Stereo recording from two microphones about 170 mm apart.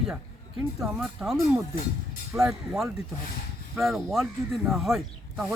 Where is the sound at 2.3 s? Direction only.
15° right (ahead or behind).